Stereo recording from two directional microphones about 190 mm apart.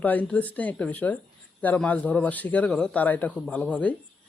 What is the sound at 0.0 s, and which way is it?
Speech, 10° left (ahead or behind).